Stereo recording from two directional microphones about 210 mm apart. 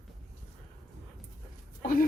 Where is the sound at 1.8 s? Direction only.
40° left (ahead or behind).